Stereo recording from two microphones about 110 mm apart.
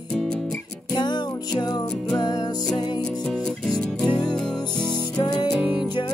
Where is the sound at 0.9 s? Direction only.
40° left (ahead or behind).